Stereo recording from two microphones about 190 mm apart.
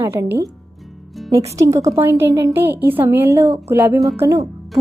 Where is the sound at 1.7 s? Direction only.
15° right (ahead or behind).